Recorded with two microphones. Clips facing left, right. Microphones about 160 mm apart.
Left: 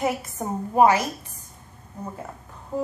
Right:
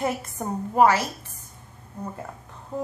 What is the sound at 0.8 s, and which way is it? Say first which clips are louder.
Speech: left 1 dB; 15° left (ahead or behind).